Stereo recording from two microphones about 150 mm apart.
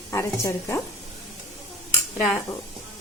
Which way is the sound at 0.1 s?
20° left (ahead or behind).